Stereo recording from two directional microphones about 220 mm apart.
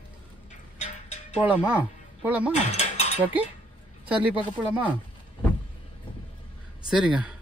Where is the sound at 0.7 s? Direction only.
30° left (ahead or behind).